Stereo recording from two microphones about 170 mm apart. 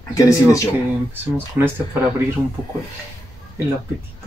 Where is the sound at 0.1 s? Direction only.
20° left (ahead or behind).